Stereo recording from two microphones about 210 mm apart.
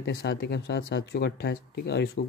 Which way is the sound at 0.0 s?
50° left (ahead or behind).